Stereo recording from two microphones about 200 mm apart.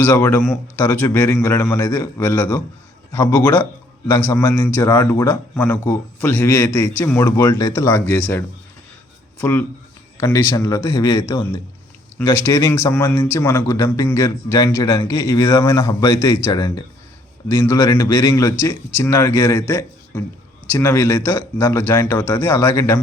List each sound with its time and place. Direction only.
0.0 s speech: 10° left (ahead or behind)